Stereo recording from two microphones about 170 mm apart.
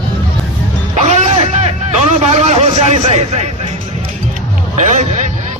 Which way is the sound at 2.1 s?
40° right (ahead or behind).